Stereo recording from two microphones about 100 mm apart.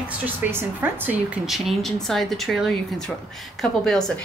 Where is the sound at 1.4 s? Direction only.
Centre (ahead or behind).